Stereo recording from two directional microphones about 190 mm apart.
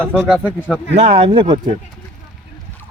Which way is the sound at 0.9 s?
35° right (ahead or behind).